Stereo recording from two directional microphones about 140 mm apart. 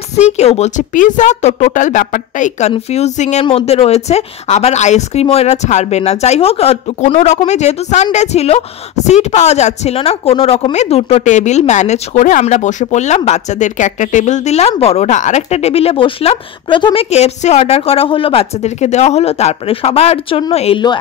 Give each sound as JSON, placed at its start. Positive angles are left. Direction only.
{"t": 0.4, "sound": "a woman's voice", "side_deg": 50}
{"t": 2.9, "sound": "a woman's voice", "side_deg": 55}
{"t": 3.4, "sound": "a woman's voice", "side_deg": 45}
{"t": 17.1, "sound": "a woman's voice", "side_deg": 50}